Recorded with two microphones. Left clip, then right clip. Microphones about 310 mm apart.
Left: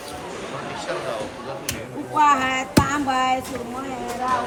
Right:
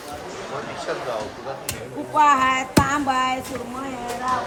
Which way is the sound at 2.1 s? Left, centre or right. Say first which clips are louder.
Right 1 dB; centre.